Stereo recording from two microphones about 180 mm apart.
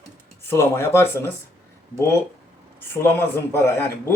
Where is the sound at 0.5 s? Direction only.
15° left (ahead or behind).